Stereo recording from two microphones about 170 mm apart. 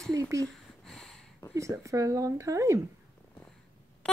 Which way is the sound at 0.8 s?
5° left (ahead or behind).